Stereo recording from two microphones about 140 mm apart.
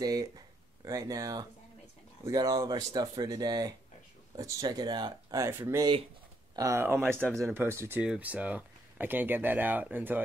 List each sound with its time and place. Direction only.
0.0 s speech: 25° right (ahead or behind)
7.0 s speech: 5° left (ahead or behind)
7.3 s speech: 20° right (ahead or behind)